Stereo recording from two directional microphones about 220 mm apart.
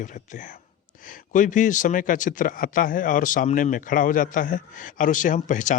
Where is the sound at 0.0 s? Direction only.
35° left (ahead or behind).